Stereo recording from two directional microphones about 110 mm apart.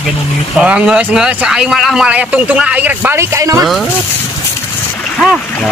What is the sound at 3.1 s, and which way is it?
Speech, 30° right (ahead or behind).